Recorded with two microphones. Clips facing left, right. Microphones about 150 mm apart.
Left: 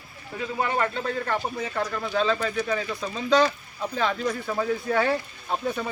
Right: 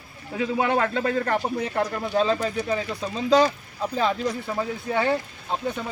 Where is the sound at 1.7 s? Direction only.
25° right (ahead or behind).